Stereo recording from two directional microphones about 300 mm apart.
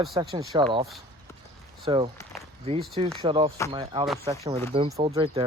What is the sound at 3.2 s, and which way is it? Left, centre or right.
Speech, centre.